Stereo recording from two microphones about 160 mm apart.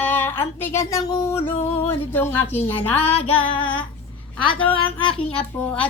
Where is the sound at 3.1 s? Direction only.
35° left (ahead or behind).